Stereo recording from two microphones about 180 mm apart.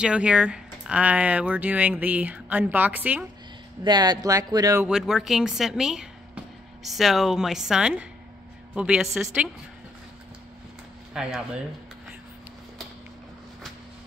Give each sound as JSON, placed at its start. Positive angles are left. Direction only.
{"t": 0.0, "sound": "speech", "side_deg": -5}
{"t": 3.8, "sound": "speech", "side_deg": -25}
{"t": 4.8, "sound": "a woman's voice", "side_deg": -5}
{"t": 11.1, "sound": "speech", "side_deg": -5}